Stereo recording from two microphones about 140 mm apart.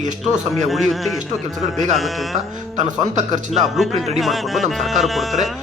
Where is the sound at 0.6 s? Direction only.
Centre (ahead or behind).